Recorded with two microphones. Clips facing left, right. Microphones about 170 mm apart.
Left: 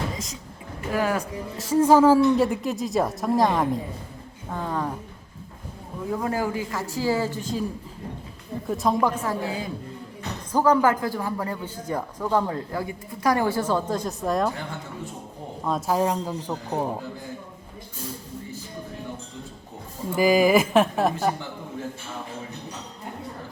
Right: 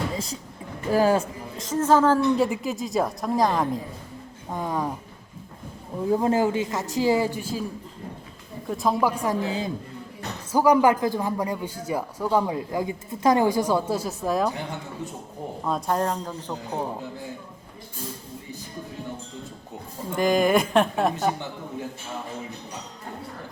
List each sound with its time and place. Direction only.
0.9 s speech: 30° right (ahead or behind)
1.5 s a woman's voice: 10° left (ahead or behind)
4.5 s a man's voice: 15° right (ahead or behind)
6.1 s speech: 30° right (ahead or behind); by 7.6 s 10° right (ahead or behind)
8.6 s a man's voice: centre (ahead or behind); by 9.7 s 25° right (ahead or behind)
10.5 s a man's voice: 10° right (ahead or behind)
15.6 s speech: centre (ahead or behind)
20.1 s a woman's voice: 5° left (ahead or behind)